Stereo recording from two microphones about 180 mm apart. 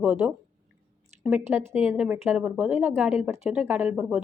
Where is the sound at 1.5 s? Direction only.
10° right (ahead or behind).